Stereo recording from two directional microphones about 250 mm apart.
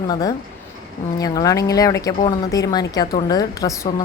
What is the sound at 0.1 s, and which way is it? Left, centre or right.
A woman's voice, centre.